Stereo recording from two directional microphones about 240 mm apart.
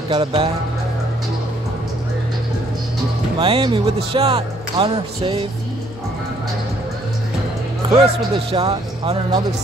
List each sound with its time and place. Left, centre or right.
0.1 s speech: right
3.3 s speech: right
7.8 s music: centre
8.5 s speech: right